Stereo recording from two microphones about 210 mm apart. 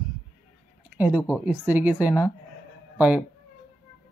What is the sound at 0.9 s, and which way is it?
Speech, 5° right (ahead or behind).